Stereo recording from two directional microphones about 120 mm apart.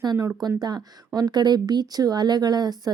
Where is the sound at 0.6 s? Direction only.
35° right (ahead or behind).